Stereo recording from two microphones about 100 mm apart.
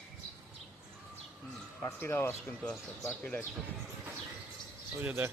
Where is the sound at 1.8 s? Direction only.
20° left (ahead or behind).